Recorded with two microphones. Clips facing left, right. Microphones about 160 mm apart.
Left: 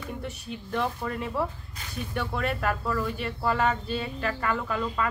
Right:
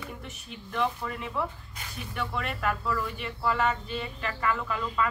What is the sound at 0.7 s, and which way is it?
Speech, 40° left (ahead or behind).